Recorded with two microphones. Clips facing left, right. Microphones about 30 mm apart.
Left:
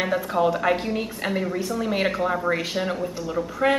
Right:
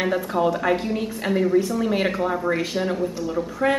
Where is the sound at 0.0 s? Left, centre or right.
Centre.